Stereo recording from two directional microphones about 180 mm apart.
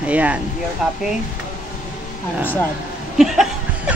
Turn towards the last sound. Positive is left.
turn(degrees=0)  # may be behind; listen again after turning